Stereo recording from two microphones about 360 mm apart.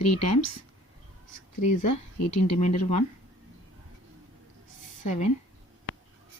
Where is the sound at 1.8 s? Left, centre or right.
Left.